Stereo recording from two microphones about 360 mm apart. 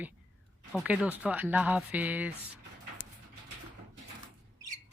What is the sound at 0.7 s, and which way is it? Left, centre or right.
Speech, centre.